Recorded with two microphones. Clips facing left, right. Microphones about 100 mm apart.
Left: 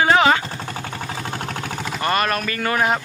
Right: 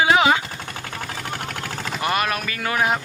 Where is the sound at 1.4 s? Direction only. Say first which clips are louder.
Left 2 dB; 20° left (ahead or behind).